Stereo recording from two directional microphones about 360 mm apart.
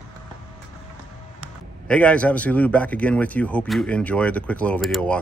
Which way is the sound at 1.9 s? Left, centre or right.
Centre.